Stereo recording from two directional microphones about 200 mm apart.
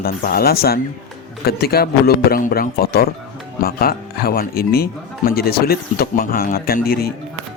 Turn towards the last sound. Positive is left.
turn(degrees=50)  # may be behind; listen again after turning